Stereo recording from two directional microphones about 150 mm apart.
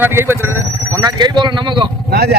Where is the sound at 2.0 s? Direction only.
90° right.